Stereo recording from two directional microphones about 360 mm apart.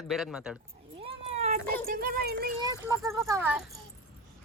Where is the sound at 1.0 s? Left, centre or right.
Centre.